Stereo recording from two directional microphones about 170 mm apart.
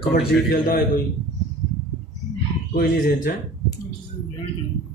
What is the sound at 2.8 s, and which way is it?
Speech, 60° left (ahead or behind).